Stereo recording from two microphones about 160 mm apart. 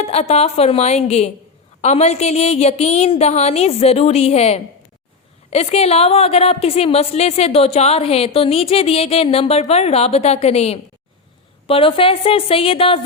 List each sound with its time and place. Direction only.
0.0 s a woman's voice: 40° left (ahead or behind)